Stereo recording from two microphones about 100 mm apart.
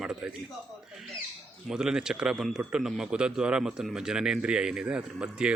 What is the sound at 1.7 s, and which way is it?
A man's voice, 5° right (ahead or behind).